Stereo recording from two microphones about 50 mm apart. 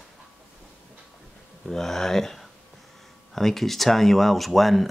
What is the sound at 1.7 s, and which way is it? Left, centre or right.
Speech, centre.